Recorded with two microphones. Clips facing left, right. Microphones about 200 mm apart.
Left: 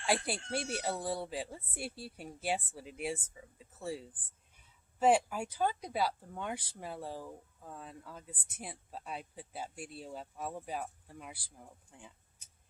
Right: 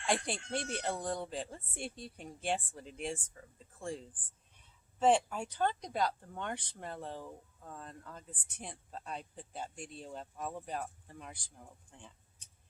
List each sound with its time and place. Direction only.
0.0 s speech: 5° left (ahead or behind)